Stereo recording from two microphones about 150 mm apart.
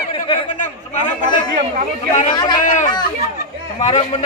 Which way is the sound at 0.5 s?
60° left (ahead or behind).